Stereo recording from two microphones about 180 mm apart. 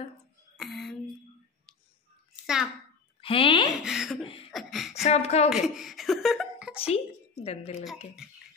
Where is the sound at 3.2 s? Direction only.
30° left (ahead or behind).